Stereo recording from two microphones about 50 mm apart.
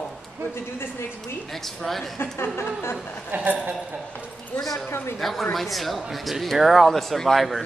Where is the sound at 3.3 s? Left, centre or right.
Right.